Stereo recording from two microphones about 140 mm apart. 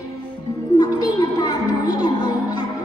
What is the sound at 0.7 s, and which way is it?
Music, 30° left (ahead or behind).